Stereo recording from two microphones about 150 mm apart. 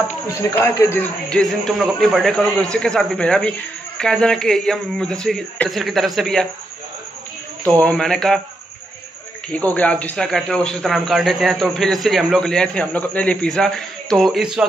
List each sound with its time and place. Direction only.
0.4 s a man's voice: 20° left (ahead or behind)
1.3 s speech: 5° left (ahead or behind)
7.6 s speech: 10° left (ahead or behind)
9.5 s speech: 10° left (ahead or behind)